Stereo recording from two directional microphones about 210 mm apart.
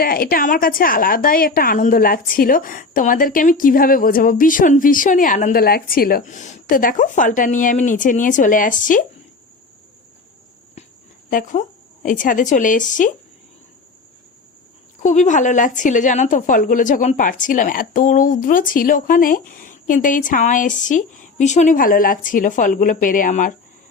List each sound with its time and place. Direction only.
0.0 s a woman's voice: 45° left (ahead or behind)
11.3 s a woman's voice: 40° left (ahead or behind)
15.0 s a woman's voice: 35° left (ahead or behind)